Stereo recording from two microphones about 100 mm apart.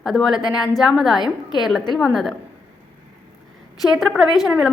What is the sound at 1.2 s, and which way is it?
Speech, 45° left (ahead or behind).